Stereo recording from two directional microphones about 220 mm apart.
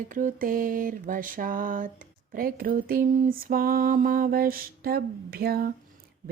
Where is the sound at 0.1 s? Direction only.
35° right (ahead or behind).